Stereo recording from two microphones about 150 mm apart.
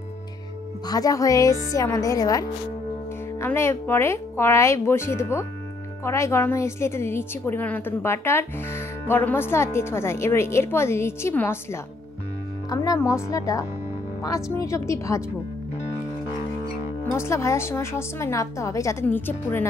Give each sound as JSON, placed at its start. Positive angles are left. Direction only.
{"t": 0.8, "sound": "a woman's voice", "side_deg": 25}
{"t": 17.0, "sound": "a woman's voice", "side_deg": 20}